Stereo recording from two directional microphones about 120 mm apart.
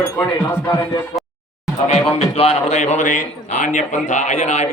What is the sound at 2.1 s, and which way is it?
Speech, 55° left (ahead or behind).